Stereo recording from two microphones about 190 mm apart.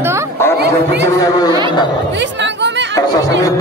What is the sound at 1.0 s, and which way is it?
Speech, 15° left (ahead or behind).